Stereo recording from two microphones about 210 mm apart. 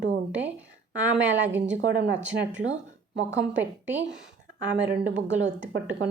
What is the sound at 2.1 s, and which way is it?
Speech, 5° right (ahead or behind).